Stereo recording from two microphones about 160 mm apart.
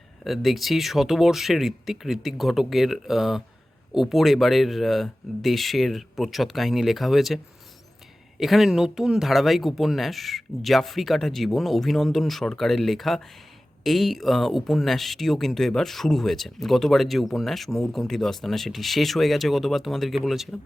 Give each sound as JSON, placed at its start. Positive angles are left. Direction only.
{"t": 0.3, "sound": "speech", "side_deg": 0}
{"t": 8.4, "sound": "speech", "side_deg": 0}